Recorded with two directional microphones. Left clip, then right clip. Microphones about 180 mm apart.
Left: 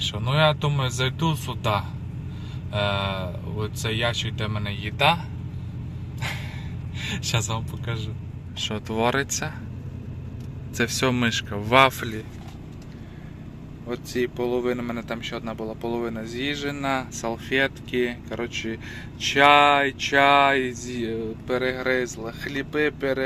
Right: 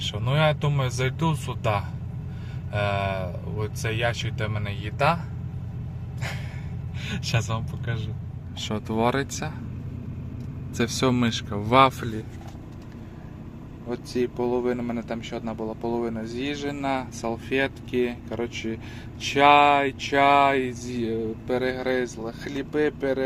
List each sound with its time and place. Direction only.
0.0 s speech: 20° right (ahead or behind)
7.0 s speech: 15° right (ahead or behind)
10.8 s speech: 10° right (ahead or behind)
13.8 s speech: 5° right (ahead or behind)